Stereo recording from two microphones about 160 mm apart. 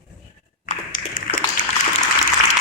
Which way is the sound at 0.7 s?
55° left (ahead or behind).